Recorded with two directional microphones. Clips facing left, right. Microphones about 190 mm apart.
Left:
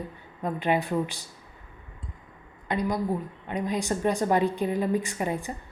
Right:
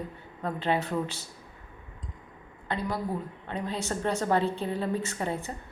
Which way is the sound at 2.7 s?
15° left (ahead or behind).